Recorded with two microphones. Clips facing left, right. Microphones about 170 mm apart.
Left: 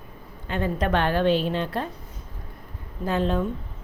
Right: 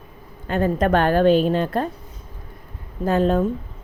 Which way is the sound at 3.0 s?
45° right (ahead or behind).